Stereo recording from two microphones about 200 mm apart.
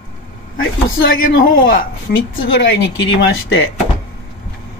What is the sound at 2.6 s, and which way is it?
Speech, 60° left (ahead or behind).